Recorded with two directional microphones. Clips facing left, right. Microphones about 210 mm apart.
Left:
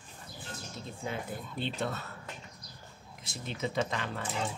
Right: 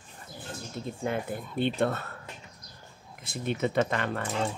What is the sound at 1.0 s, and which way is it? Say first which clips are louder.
Speech: right 6 dB; 55° right (ahead or behind).